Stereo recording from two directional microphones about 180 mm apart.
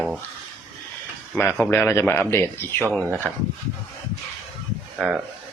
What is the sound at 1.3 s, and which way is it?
Speech, 10° left (ahead or behind).